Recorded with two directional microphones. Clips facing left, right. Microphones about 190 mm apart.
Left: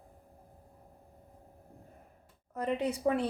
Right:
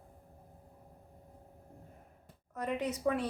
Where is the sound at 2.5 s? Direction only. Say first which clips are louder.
Left 3 dB; 30° left (ahead or behind).